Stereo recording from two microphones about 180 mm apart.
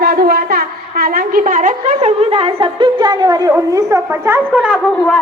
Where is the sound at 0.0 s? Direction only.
60° right (ahead or behind); by 4.8 s 5° right (ahead or behind).